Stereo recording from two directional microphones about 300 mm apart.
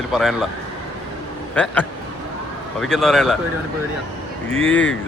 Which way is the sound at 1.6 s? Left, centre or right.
Centre.